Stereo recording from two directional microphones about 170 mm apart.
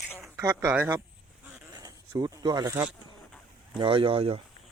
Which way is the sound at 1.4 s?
10° right (ahead or behind).